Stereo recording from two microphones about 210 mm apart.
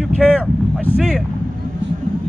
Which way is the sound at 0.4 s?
5° left (ahead or behind).